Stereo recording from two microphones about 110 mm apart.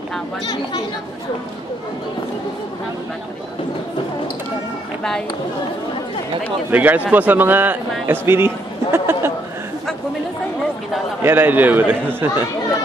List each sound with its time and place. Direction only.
6.7 s a man's voice: 15° right (ahead or behind)
11.2 s a man's voice: 15° right (ahead or behind)